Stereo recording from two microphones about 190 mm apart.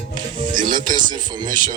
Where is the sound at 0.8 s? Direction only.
25° right (ahead or behind).